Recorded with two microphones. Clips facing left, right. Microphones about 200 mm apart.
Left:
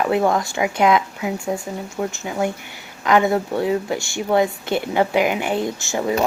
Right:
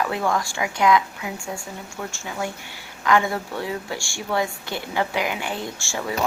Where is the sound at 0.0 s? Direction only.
25° left (ahead or behind).